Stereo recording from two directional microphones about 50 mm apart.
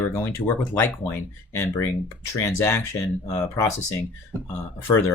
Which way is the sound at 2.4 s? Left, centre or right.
Left.